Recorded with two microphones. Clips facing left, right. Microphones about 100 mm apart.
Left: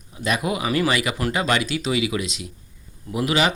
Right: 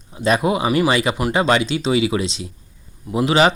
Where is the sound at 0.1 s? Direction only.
30° right (ahead or behind).